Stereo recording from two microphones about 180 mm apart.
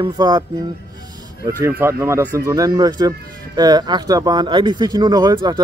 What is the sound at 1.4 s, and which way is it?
Speech, 15° right (ahead or behind).